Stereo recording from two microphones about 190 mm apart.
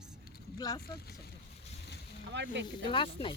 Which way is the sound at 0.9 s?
55° left (ahead or behind).